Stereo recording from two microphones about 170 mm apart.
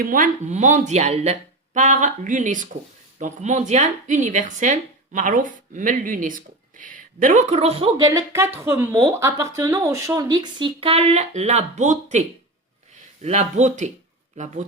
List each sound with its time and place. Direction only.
0.0 s speech: 50° right (ahead or behind); by 7.9 s 35° right (ahead or behind)
7.9 s speech: 20° right (ahead or behind); by 12.2 s 45° right (ahead or behind)
13.2 s speech: 45° right (ahead or behind)